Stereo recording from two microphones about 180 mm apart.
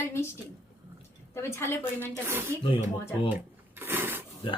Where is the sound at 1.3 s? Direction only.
15° left (ahead or behind).